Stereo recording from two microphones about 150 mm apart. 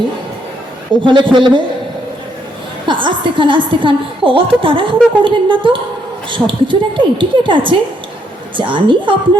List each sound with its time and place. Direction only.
1.0 s a woman's voice: 30° right (ahead or behind)
2.8 s a woman's voice: 35° right (ahead or behind)